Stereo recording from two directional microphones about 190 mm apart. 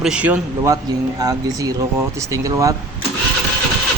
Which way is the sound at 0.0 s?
5° right (ahead or behind).